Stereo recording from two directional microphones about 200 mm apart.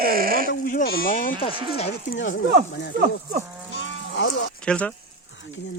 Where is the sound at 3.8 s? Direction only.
65° left (ahead or behind).